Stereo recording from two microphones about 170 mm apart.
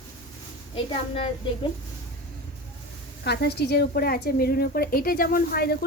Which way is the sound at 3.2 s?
75° left (ahead or behind).